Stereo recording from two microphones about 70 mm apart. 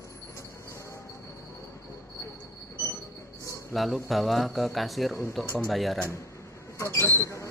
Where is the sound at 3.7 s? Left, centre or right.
Centre.